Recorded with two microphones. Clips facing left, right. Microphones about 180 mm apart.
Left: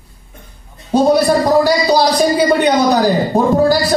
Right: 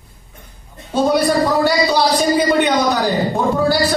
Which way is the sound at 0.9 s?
40° left (ahead or behind).